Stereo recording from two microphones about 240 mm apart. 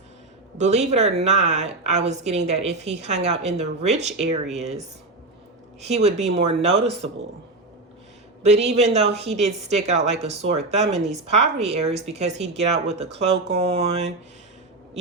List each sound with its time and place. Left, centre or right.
0.6 s speech: right
8.4 s speech: right